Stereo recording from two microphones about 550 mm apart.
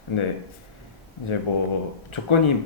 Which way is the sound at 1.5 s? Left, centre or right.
Left.